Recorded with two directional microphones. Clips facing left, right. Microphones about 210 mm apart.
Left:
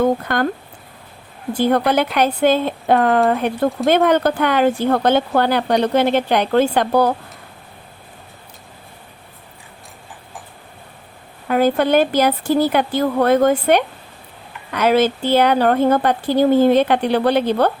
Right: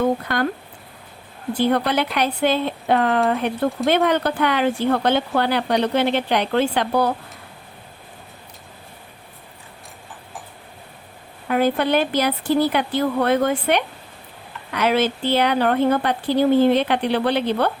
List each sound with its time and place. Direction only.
0.3 s speech: 50° left (ahead or behind)
1.5 s speech: 45° left (ahead or behind)
11.4 s speech: 45° left (ahead or behind)